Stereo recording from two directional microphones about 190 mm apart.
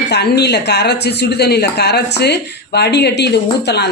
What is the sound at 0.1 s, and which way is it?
Speech, 60° left (ahead or behind).